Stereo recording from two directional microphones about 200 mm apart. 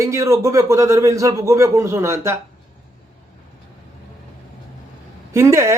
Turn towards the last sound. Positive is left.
turn(degrees=-15)  # may be behind; listen again after turning